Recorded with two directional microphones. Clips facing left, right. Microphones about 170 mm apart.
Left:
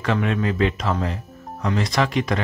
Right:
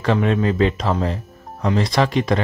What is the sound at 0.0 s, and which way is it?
Speech, 30° right (ahead or behind).